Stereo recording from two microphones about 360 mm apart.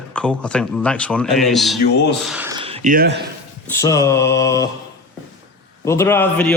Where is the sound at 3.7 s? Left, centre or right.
Centre.